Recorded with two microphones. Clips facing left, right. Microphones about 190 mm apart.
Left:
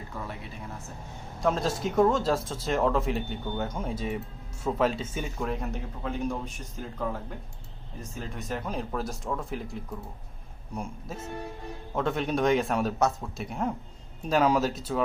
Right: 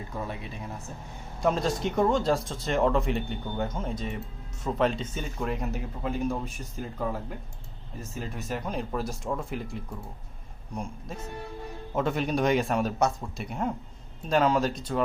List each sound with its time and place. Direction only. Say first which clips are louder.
0.1 s speech: right 3 dB; 15° right (ahead or behind)
1.4 s speech: right 1 dB; centre (ahead or behind)
8.2 s speech: right 1 dB; 5° right (ahead or behind)
11.9 s speech: right 1 dB; centre (ahead or behind)